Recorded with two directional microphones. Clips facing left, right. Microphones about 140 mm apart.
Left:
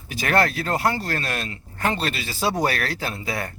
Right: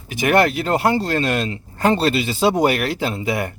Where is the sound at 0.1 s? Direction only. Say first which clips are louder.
Right 5 dB; 20° right (ahead or behind).